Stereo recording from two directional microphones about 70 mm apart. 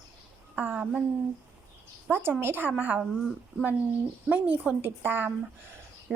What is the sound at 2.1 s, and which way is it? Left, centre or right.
Speech, right.